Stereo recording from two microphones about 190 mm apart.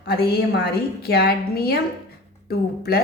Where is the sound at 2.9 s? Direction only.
55° left (ahead or behind).